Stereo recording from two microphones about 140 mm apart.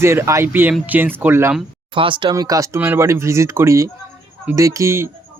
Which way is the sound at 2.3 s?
25° right (ahead or behind).